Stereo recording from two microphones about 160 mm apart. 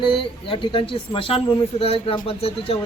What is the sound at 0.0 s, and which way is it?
Speech, 30° left (ahead or behind).